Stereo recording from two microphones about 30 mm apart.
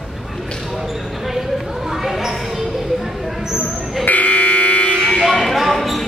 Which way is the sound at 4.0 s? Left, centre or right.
Left.